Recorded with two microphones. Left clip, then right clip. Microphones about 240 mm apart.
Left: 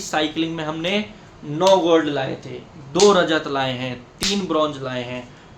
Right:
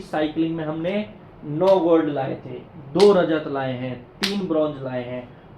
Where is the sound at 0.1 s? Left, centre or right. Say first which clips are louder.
Left 1 dB; left.